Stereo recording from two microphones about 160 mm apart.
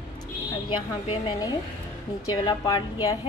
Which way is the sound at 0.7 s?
35° left (ahead or behind).